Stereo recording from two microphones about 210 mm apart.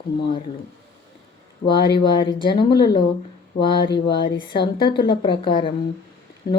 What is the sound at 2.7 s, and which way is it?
Speech, 50° left (ahead or behind).